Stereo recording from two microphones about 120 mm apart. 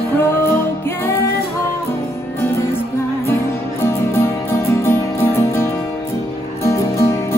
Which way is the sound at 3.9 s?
20° left (ahead or behind).